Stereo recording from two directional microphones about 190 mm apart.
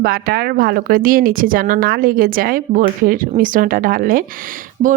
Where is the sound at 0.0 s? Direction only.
55° right (ahead or behind).